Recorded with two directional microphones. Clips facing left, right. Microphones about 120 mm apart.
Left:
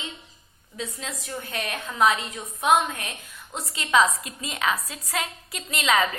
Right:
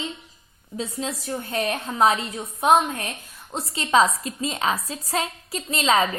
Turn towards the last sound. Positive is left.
turn(degrees=-35)  # may be behind; listen again after turning